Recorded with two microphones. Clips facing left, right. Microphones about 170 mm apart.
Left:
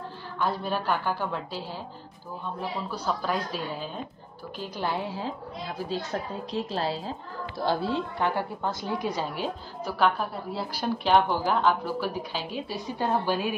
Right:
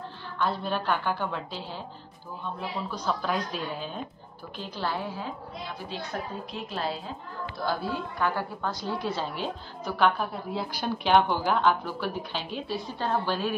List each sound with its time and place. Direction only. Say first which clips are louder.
0.4 s a woman's voice: even; 10° left (ahead or behind)
2.9 s a woman's voice: even; 5° left (ahead or behind)
4.6 s a woman's voice: left 2 dB; 15° left (ahead or behind)
5.1 s a woman's voice: left 2 dB; 30° left (ahead or behind); by 13.6 s 10° left (ahead or behind)